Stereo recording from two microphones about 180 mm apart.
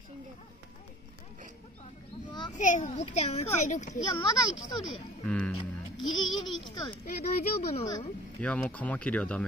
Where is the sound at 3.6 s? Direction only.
40° left (ahead or behind).